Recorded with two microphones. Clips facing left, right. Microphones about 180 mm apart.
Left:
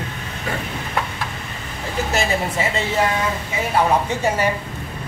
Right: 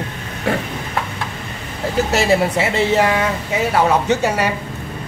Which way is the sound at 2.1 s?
75° right (ahead or behind).